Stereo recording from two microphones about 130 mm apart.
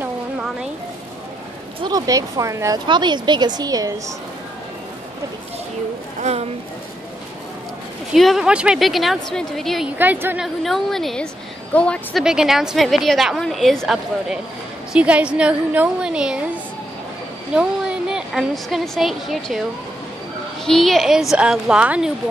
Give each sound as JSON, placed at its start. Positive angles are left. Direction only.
{"t": 1.8, "sound": "speech", "side_deg": -30}
{"t": 2.9, "sound": "a woman's voice", "side_deg": -35}
{"t": 6.2, "sound": "speech", "side_deg": -50}
{"t": 8.1, "sound": "a woman's voice", "side_deg": 0}
{"t": 9.9, "sound": "a woman's voice", "side_deg": -15}
{"t": 10.4, "sound": "a woman's voice", "side_deg": 0}
{"t": 12.2, "sound": "a woman's voice", "side_deg": -5}
{"t": 17.6, "sound": "a woman's voice", "side_deg": -5}
{"t": 20.6, "sound": "a woman's voice", "side_deg": 0}